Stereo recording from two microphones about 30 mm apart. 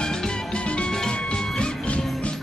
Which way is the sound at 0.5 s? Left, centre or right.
Left.